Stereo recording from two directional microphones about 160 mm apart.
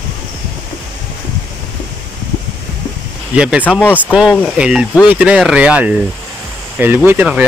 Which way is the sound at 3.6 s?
10° left (ahead or behind).